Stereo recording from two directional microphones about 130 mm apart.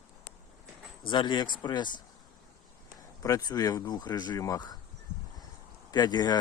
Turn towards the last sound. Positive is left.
turn(degrees=30)  # may be behind; listen again after turning